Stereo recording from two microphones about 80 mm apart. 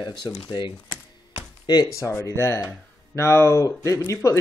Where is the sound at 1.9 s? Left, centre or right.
Left.